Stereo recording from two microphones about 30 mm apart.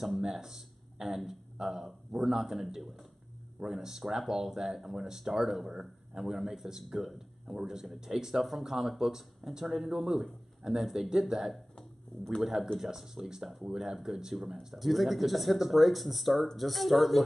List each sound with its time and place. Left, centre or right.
0.0 s speech: centre
8.4 s a man's voice: centre
12.1 s speech: left
12.7 s speech: centre